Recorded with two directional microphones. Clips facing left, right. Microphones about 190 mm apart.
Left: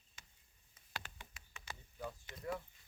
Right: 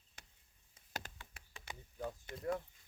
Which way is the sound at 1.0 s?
40° right (ahead or behind).